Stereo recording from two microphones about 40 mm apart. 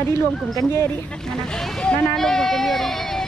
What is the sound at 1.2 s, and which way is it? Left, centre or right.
Speech, centre.